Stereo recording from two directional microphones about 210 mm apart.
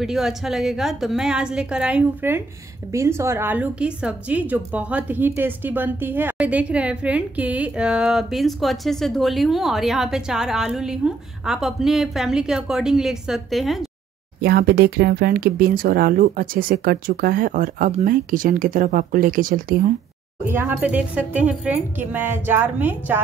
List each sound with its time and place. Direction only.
0.0 s a woman's voice: centre (ahead or behind)
14.4 s speech: 50° right (ahead or behind)
20.4 s speech: 10° right (ahead or behind)